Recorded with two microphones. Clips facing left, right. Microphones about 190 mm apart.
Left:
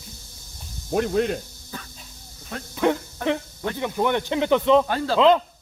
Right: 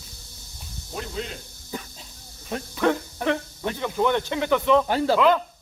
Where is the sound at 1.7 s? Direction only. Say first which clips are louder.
Right 4 dB; 15° right (ahead or behind).